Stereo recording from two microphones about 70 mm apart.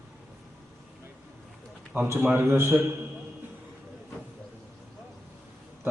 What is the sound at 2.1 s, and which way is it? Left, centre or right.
Speech, right.